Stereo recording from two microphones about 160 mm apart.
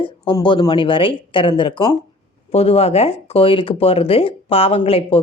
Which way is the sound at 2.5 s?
40° left (ahead or behind).